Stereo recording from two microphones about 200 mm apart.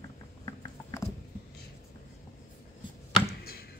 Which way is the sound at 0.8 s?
10° left (ahead or behind).